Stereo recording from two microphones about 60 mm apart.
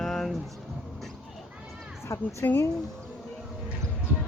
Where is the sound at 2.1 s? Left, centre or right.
Left.